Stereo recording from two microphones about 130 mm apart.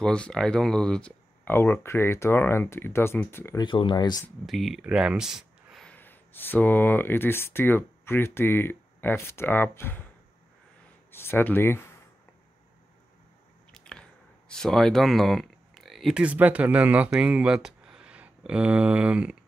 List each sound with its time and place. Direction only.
0.0 s speech: 5° left (ahead or behind)
3.5 s speech: 40° left (ahead or behind)
4.5 s speech: centre (ahead or behind)
5.9 s speech: 15° left (ahead or behind)
11.1 s speech: 20° left (ahead or behind)
13.7 s squish: 5° left (ahead or behind)
14.5 s speech: 5° left (ahead or behind)